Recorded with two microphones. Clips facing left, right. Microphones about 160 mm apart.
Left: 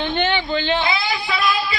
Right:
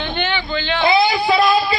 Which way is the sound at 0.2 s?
30° left (ahead or behind).